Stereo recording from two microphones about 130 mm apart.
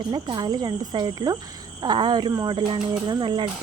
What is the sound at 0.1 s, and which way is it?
Speech, 35° right (ahead or behind).